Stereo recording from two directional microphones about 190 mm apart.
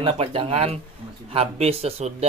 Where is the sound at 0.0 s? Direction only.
30° right (ahead or behind).